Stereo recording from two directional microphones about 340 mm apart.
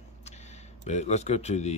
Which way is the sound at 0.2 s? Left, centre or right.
Centre.